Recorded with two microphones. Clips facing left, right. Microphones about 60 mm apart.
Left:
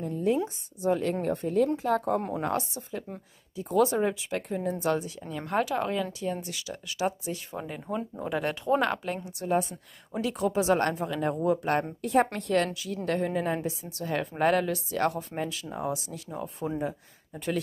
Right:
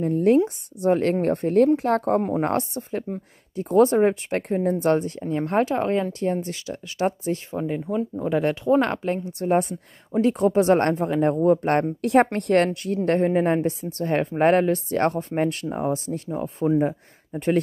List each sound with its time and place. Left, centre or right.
0.0 s speech: right
5.3 s speech: right
7.5 s speech: centre
7.8 s speech: centre
8.3 s speech: right
9.4 s speech: right
12.0 s a woman's voice: right
12.4 s speech: right
12.8 s speech: right
15.8 s speech: right
16.3 s speech: right
16.8 s speech: right